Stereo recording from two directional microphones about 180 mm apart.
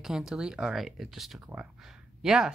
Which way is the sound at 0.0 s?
5° right (ahead or behind).